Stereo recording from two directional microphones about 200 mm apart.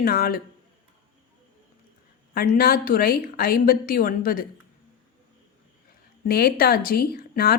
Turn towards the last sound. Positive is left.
turn(degrees=50)  # may be behind; listen again after turning